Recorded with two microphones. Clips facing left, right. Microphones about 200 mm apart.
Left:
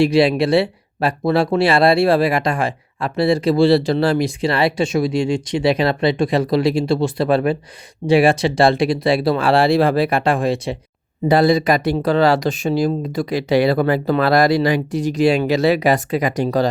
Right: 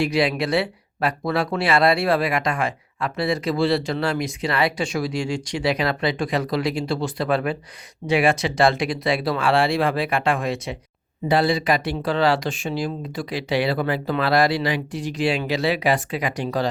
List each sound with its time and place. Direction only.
0.0 s speech: 30° left (ahead or behind)
11.3 s speech: 40° left (ahead or behind)